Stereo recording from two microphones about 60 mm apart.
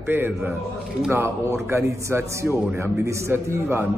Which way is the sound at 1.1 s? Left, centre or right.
Right.